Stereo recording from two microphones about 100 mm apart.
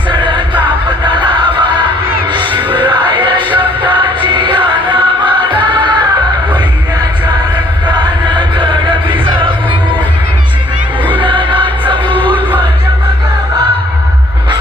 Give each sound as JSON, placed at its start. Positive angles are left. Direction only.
{"t": 0.1, "sound": "music", "side_deg": -55}
{"t": 2.3, "sound": "music", "side_deg": -50}
{"t": 8.3, "sound": "music", "side_deg": -50}
{"t": 11.2, "sound": "music", "side_deg": -55}
{"t": 12.1, "sound": "music", "side_deg": 15}